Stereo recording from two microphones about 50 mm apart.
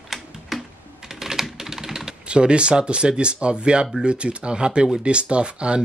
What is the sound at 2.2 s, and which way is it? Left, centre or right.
Speech, right.